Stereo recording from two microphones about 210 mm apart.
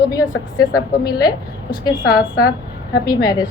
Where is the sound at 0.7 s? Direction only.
20° left (ahead or behind).